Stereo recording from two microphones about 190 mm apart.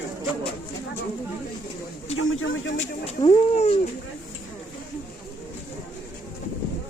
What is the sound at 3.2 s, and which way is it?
Speech, 35° left (ahead or behind).